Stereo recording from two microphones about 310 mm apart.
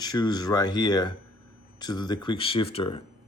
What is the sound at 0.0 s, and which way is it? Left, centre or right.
Speech, centre.